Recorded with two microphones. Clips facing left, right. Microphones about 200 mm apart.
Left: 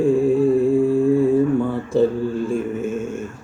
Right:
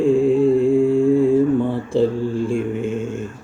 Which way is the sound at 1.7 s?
25° right (ahead or behind).